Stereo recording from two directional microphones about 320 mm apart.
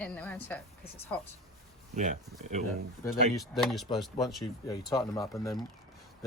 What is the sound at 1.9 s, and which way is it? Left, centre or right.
Speech, right.